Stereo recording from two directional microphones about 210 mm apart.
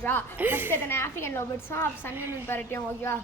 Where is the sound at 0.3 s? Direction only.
10° right (ahead or behind).